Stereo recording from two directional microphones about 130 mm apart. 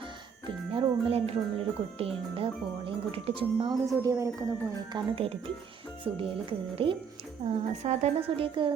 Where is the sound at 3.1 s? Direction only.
40° right (ahead or behind).